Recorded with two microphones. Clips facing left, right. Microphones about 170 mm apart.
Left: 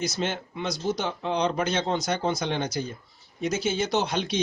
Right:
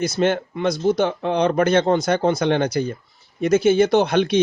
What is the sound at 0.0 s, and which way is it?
Speech, 55° right (ahead or behind).